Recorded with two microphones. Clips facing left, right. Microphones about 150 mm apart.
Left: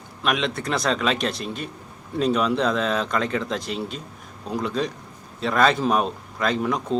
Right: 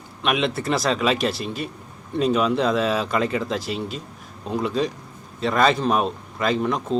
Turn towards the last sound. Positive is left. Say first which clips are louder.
# right 1 dB
turn(degrees=0)  # may be behind; listen again after turning